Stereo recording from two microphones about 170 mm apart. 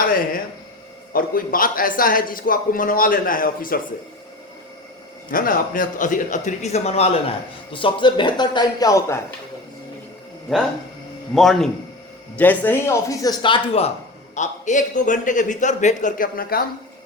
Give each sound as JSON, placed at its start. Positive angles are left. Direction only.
{"t": 1.1, "sound": "a man's voice", "side_deg": 55}
{"t": 5.3, "sound": "speech", "side_deg": 55}
{"t": 11.3, "sound": "a man's voice", "side_deg": 0}
{"t": 14.3, "sound": "a man's voice", "side_deg": 45}